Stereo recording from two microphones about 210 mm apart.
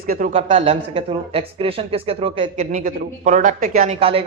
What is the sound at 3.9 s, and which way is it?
Speech, 25° right (ahead or behind).